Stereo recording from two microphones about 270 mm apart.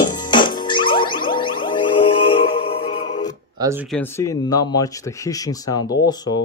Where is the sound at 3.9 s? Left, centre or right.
Centre.